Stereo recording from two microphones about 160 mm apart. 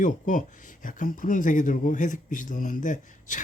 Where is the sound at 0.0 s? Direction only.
55° left (ahead or behind).